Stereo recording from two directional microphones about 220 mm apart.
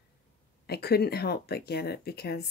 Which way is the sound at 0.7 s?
45° left (ahead or behind).